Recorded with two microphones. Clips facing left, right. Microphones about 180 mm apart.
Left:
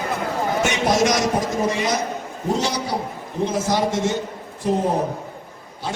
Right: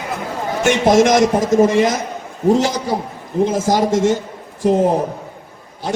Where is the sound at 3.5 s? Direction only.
45° right (ahead or behind).